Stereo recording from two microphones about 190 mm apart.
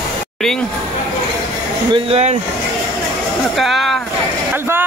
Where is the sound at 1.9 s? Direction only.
35° right (ahead or behind).